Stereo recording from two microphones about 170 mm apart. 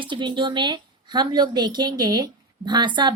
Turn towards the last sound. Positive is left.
turn(degrees=-25)  # may be behind; listen again after turning